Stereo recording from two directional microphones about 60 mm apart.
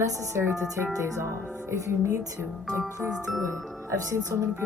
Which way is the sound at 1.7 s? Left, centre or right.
Right.